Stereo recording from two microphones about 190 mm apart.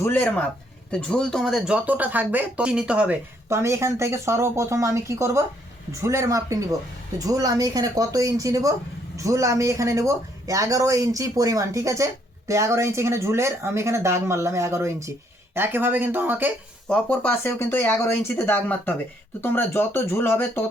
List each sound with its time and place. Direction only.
0.0 s speech: 10° left (ahead or behind); by 16.5 s 10° right (ahead or behind)
16.9 s speech: 10° left (ahead or behind)